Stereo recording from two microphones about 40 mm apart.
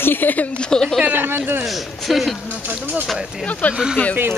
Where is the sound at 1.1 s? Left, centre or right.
Right.